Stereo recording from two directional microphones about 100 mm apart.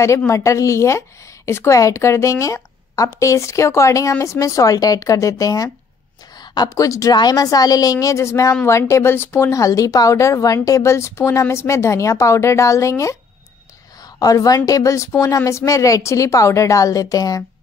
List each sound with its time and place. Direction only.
0.3 s a woman's voice: 30° left (ahead or behind)